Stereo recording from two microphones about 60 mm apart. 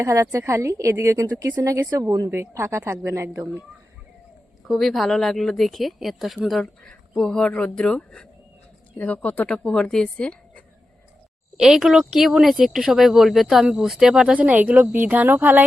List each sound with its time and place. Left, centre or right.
0.0 s a woman's voice: right
2.3 s a woman's voice: right
4.7 s speech: centre
7.2 s a woman's voice: centre
9.0 s speech: left
9.6 s a woman's voice: centre
11.5 s speech: centre
14.3 s a woman's voice: right